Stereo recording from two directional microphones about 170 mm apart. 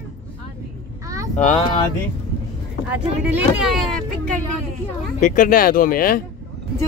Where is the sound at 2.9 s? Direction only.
10° right (ahead or behind).